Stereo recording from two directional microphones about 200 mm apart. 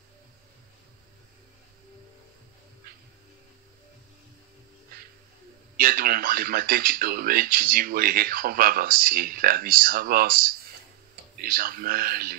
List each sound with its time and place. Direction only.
5.8 s speech: 45° right (ahead or behind)